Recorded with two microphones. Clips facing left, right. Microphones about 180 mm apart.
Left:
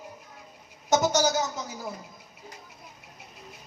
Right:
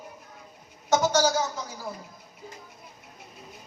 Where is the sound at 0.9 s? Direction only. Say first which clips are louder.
Right 1 dB; 20° left (ahead or behind).